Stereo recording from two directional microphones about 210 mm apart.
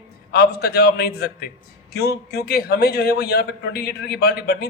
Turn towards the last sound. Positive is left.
turn(degrees=50)  # may be behind; listen again after turning